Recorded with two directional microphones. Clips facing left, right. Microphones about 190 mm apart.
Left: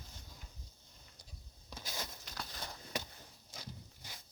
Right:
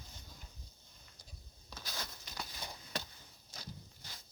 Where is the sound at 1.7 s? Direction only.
20° left (ahead or behind).